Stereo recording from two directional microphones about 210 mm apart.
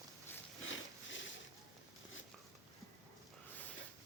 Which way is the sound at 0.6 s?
65° left (ahead or behind).